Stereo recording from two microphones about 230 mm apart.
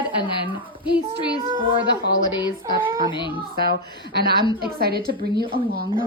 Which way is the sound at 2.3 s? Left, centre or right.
Centre.